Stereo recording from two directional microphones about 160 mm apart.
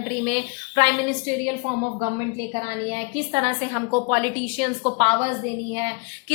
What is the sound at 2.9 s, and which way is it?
A woman's voice, 35° right (ahead or behind).